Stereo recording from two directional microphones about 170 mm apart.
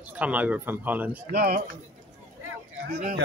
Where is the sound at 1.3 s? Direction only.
65° right (ahead or behind).